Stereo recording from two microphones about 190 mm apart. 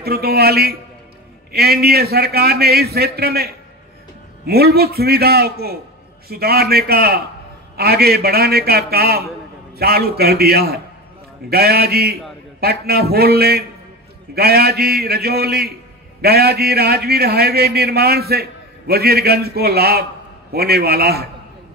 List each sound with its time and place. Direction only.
0.0 s a man's voice: 55° right (ahead or behind)